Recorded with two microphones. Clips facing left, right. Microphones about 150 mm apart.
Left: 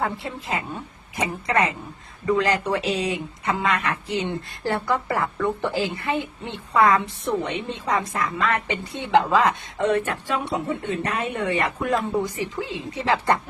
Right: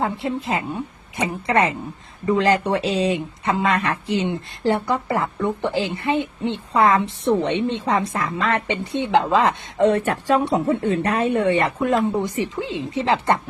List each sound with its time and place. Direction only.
0.0 s speech: 25° right (ahead or behind)